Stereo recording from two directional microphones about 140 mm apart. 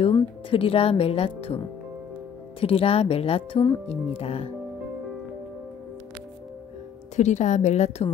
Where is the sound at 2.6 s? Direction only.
45° left (ahead or behind).